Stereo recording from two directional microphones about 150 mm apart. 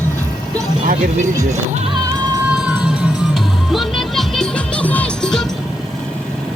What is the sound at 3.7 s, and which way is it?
Music, centre (ahead or behind).